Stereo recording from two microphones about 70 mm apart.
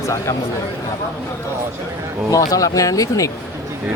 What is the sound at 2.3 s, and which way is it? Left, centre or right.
Speech, left.